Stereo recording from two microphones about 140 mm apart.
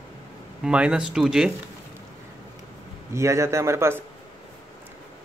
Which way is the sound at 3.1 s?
20° right (ahead or behind).